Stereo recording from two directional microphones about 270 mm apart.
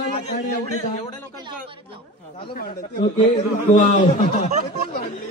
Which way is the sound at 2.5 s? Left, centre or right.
Left.